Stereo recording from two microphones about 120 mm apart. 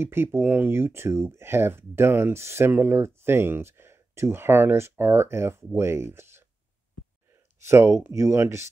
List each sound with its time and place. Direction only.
0.0 s speech: 20° right (ahead or behind)
7.6 s speech: 25° right (ahead or behind)